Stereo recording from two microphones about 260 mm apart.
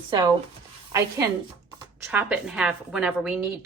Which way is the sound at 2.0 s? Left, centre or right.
Centre.